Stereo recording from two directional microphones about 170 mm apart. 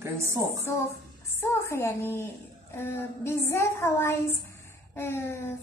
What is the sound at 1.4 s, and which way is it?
A woman's voice, 15° left (ahead or behind).